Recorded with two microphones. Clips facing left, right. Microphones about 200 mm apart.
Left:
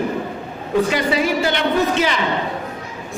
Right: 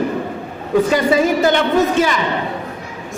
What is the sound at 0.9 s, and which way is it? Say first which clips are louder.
A man's voice: right 4 dB; 45° right (ahead or behind).